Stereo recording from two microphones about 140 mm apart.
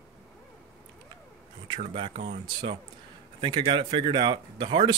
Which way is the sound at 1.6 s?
35° right (ahead or behind).